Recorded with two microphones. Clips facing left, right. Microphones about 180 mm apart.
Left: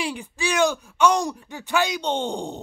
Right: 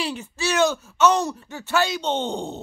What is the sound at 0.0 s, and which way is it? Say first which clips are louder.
Speech: even; 15° left (ahead or behind).